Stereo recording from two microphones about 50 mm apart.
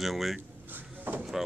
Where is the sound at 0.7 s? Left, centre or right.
Right.